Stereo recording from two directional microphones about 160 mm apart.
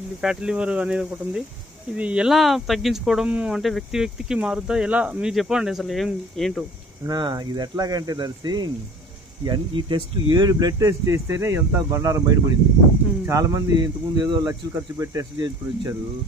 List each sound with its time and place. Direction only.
0.2 s speech: 5° right (ahead or behind)
7.1 s speech: 25° right (ahead or behind)